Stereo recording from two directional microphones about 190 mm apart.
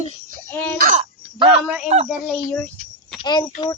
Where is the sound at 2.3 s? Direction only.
5° left (ahead or behind).